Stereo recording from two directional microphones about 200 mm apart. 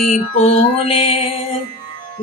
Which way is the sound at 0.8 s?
30° left (ahead or behind).